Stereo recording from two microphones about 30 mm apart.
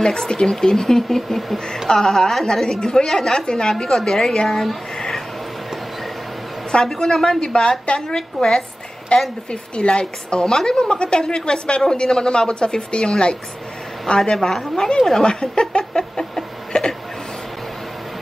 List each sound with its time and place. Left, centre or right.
0.0 s a woman's voice: left
4.9 s a sound: centre
6.7 s a woman's voice: left
9.1 s a woman's voice: left
14.3 s speech: centre
15.0 s speech: centre
15.2 s a woman's voice: left
16.0 s a sound: centre